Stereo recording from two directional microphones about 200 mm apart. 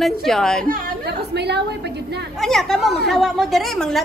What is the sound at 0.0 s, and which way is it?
Speech, centre (ahead or behind).